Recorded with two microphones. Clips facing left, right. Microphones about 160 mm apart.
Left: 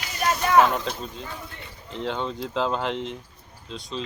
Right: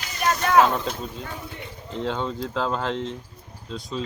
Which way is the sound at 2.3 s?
20° left (ahead or behind).